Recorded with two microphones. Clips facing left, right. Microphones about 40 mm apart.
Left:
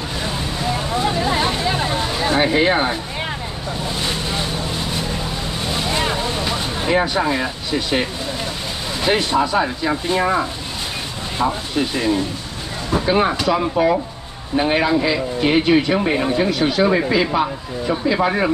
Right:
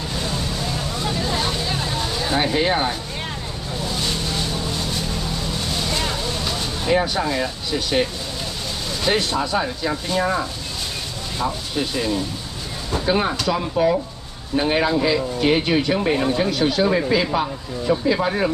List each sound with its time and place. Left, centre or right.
0.2 s vehicle: left
9.0 s speech: centre
11.7 s speech: centre